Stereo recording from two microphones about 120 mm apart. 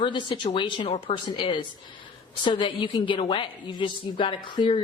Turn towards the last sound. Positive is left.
turn(degrees=40)  # may be behind; listen again after turning